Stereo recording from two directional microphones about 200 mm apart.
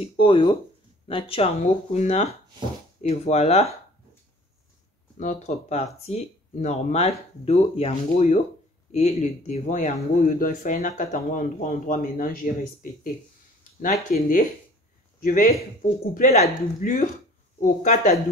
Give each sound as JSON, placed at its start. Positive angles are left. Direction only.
{"t": 0.0, "sound": "speech", "side_deg": 25}
{"t": 5.2, "sound": "speech", "side_deg": 35}
{"t": 14.1, "sound": "a man's voice", "side_deg": 45}